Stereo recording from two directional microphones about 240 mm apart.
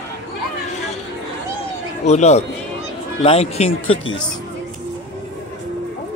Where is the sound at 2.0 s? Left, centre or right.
Left.